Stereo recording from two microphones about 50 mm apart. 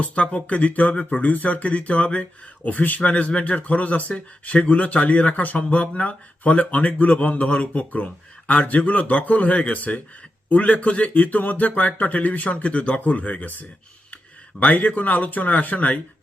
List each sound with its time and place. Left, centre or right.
0.0 s speech: left